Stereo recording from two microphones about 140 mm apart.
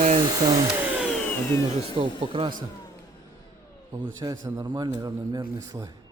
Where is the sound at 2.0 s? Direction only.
40° right (ahead or behind).